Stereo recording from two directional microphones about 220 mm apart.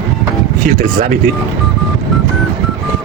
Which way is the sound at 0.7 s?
40° right (ahead or behind).